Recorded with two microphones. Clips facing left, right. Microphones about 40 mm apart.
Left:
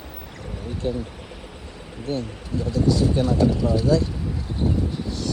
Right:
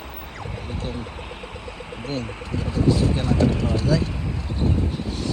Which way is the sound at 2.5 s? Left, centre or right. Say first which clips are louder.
Left 3 dB; right.